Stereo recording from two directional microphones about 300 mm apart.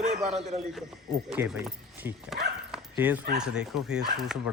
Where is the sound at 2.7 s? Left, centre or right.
Centre.